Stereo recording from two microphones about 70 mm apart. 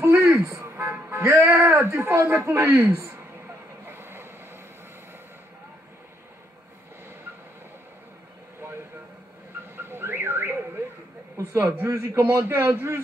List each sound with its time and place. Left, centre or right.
0.0 s music: right
3.8 s vehicle: right
9.8 s a sound: right
11.3 s a man's voice: right